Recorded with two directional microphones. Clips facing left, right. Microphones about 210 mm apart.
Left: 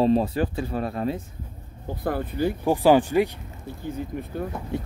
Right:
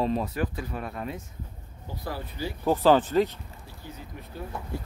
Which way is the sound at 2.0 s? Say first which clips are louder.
Left 9 dB; 55° left (ahead or behind).